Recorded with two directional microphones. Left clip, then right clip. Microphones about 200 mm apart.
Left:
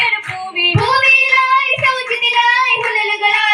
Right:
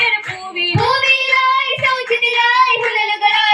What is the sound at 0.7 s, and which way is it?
Child singing, 35° left (ahead or behind).